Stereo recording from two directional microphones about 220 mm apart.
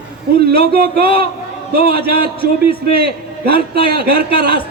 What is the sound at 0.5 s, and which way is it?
Speech, 45° right (ahead or behind).